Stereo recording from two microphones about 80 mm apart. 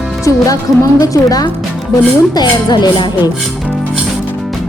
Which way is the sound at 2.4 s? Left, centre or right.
Left.